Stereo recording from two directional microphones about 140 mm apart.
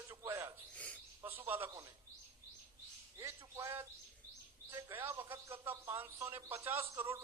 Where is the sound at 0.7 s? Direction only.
10° left (ahead or behind).